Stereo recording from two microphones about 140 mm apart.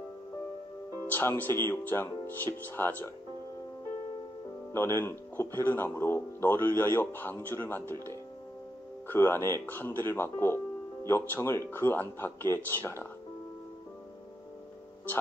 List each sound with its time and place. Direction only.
1.1 s speech: 15° left (ahead or behind)
4.7 s speech: 20° left (ahead or behind)
9.1 s speech: 15° left (ahead or behind)